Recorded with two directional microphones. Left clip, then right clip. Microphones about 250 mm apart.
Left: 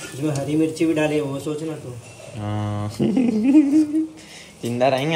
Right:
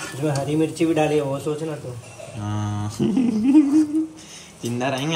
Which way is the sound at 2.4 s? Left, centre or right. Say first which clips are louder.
Left 2 dB; right.